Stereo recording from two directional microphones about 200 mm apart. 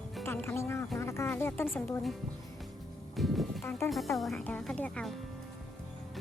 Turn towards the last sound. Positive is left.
turn(degrees=5)  # may be behind; listen again after turning